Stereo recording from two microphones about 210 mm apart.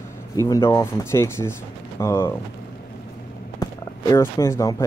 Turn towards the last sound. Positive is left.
turn(degrees=15)  # may be behind; listen again after turning